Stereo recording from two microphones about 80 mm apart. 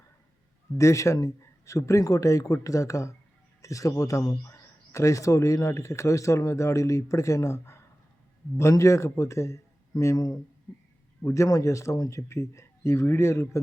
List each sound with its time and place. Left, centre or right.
0.8 s a man's voice: left
10.7 s a sound: centre
11.2 s a man's voice: left
11.4 s speech: left